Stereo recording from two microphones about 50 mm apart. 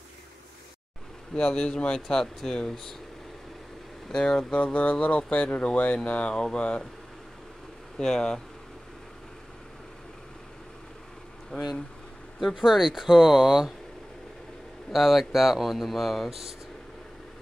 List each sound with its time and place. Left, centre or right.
1.3 s speech: centre
4.1 s speech: centre
8.0 s speech: centre
11.5 s speech: centre
12.4 s speech: centre
14.9 s speech: centre